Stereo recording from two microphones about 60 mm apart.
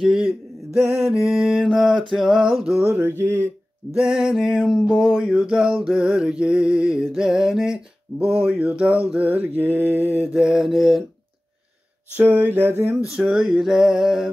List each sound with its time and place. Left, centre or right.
0.0 s music: centre
3.2 s speech: right
3.9 s music: centre
5.3 s music: centre
7.2 s a sound: centre; by 10.3 s right
10.3 s music: centre
12.2 s speech: right
13.0 s music: centre